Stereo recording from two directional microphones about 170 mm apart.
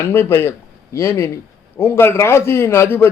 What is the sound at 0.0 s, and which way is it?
A man's voice, 15° left (ahead or behind).